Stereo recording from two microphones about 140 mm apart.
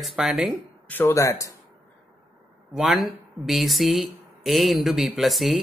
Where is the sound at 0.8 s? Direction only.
15° left (ahead or behind).